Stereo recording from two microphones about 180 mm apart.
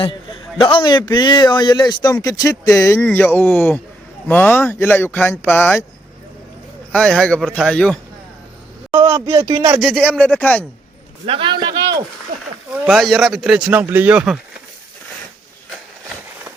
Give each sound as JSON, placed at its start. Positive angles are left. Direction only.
{"t": 0.6, "sound": "a man's voice", "side_deg": 25}
{"t": 6.9, "sound": "speech", "side_deg": 5}
{"t": 8.9, "sound": "speech", "side_deg": -15}
{"t": 9.8, "sound": "speech", "side_deg": 5}
{"t": 11.3, "sound": "speech", "side_deg": -30}
{"t": 11.6, "sound": "a sound", "side_deg": -20}
{"t": 12.8, "sound": "speech", "side_deg": 0}